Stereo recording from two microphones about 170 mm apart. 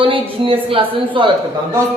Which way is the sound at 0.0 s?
30° right (ahead or behind).